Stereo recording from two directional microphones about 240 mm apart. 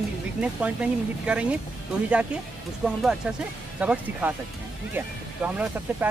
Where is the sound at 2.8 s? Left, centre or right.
Centre.